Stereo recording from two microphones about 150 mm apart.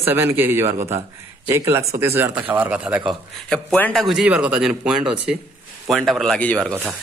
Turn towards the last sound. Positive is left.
turn(degrees=5)  # may be behind; listen again after turning